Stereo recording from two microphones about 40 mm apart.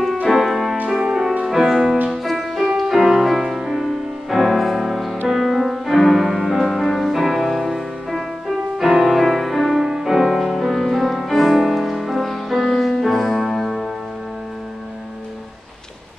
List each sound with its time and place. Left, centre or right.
0.3 s music: centre
0.8 s music: centre
3.7 s music: centre
9.8 s music: centre
10.1 s music: centre
12.6 s keyboard: centre